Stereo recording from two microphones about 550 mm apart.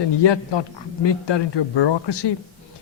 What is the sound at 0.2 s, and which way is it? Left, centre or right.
Speech, left.